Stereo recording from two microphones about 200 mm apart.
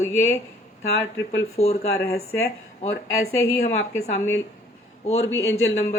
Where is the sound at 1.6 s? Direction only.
35° left (ahead or behind).